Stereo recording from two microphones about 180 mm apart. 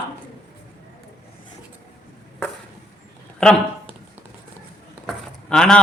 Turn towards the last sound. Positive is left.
turn(degrees=5)  # may be behind; listen again after turning